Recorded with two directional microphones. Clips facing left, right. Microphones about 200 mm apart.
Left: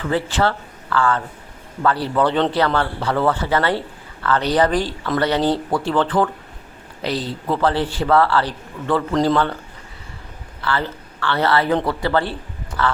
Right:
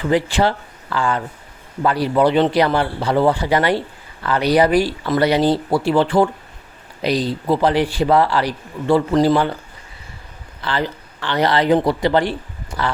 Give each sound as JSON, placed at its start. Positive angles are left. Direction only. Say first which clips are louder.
{"t": 0.0, "sound": "a man's voice", "louder": "right 3 dB", "side_deg": -15}
{"t": 10.6, "sound": "speech", "louder": "right 1 dB", "side_deg": -15}